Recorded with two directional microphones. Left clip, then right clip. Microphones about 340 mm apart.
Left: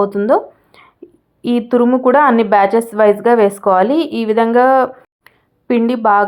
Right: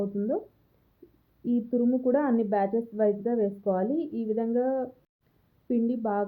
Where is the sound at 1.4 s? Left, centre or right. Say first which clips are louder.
Left 14 dB; left.